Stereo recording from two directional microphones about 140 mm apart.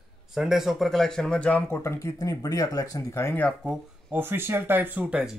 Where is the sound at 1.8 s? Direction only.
20° left (ahead or behind).